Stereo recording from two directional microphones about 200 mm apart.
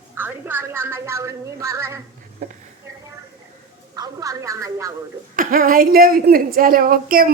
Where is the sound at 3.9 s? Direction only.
20° right (ahead or behind).